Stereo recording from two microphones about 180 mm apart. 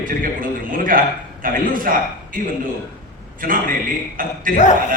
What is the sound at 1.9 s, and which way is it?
Speech, 50° right (ahead or behind).